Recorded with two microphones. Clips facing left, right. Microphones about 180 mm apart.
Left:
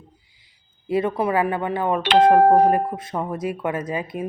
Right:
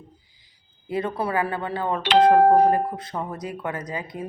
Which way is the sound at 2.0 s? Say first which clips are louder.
Left 1 dB; 55° left (ahead or behind).